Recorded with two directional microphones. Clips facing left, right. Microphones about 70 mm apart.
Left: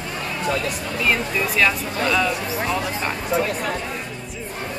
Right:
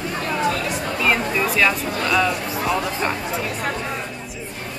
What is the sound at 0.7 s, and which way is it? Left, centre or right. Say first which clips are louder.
Speech: right 3 dB; right.